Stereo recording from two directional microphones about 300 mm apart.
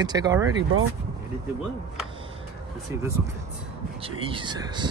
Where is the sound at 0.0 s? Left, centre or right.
Centre.